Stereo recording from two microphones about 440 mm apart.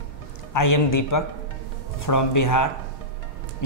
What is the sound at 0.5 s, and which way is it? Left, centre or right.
A man's voice, left.